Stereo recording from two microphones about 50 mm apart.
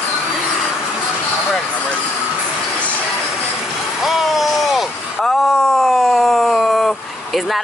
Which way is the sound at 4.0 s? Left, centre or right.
Centre.